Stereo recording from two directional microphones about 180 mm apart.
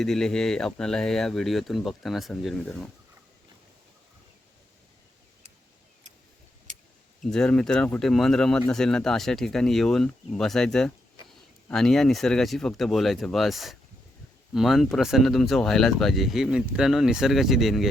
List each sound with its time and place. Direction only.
0.0 s speech: 5° left (ahead or behind)
7.3 s speech: 5° left (ahead or behind)